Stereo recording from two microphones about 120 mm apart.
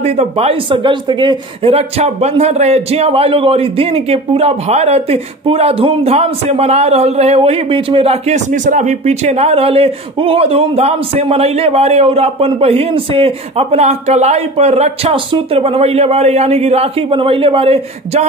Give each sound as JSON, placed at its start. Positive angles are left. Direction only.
{"t": 0.0, "sound": "speech", "side_deg": -60}
{"t": 0.7, "sound": "speech", "side_deg": -40}